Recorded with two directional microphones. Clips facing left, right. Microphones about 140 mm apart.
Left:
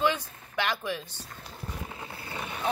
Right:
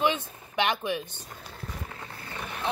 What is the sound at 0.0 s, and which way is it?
Speech, 20° right (ahead or behind).